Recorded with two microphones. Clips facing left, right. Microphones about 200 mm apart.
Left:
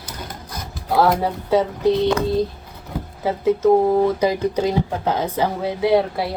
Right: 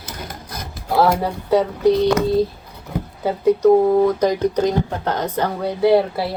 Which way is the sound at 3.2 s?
Centre (ahead or behind).